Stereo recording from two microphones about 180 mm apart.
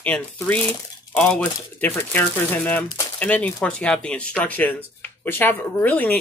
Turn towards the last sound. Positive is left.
turn(degrees=10)  # may be behind; listen again after turning